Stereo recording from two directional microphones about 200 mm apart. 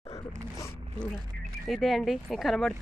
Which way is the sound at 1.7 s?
Centre (ahead or behind).